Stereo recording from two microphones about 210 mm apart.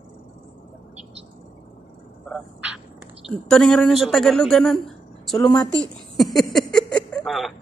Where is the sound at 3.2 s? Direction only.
5° left (ahead or behind).